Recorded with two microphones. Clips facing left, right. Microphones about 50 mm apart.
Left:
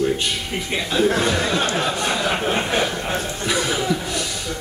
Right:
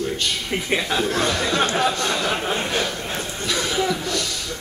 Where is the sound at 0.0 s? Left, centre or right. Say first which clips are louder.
Left 4 dB; centre.